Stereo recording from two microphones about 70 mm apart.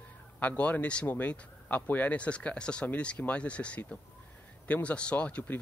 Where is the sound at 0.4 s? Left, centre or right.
Left.